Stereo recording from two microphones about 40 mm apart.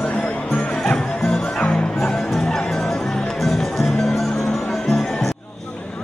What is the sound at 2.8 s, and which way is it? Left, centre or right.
Music, centre.